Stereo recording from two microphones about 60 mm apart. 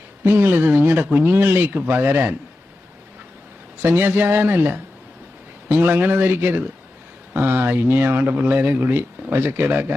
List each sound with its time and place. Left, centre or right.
0.3 s speech: right
3.8 s speech: right